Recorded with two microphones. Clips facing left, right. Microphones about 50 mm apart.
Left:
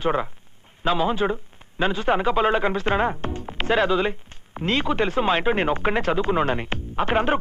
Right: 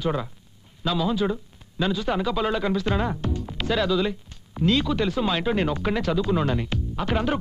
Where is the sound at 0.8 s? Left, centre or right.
Left.